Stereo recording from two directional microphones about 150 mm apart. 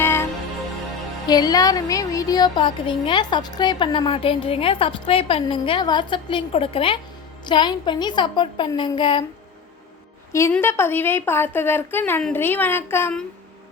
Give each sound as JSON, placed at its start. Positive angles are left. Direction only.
{"t": 0.0, "sound": "music", "side_deg": 15}
{"t": 1.3, "sound": "music", "side_deg": 25}
{"t": 10.5, "sound": "a woman's voice", "side_deg": 15}